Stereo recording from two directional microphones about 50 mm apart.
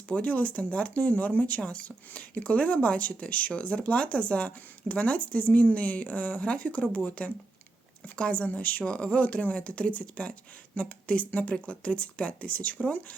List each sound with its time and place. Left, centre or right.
0.1 s speech: left